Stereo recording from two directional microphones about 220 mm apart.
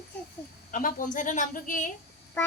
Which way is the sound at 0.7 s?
40° left (ahead or behind).